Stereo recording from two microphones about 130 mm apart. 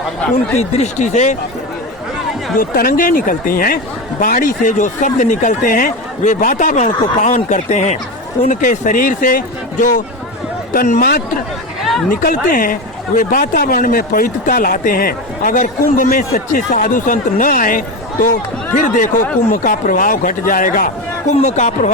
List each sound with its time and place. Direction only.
0.5 s speech: 55° left (ahead or behind)
2.6 s speech: 90° left; by 7.9 s 65° left (ahead or behind)
8.4 s speech: 80° left
10.8 s speech: 75° left (ahead or behind)
11.8 s chatter: centre (ahead or behind)
12.3 s speech: 90° left
21.4 s speech: 65° left (ahead or behind)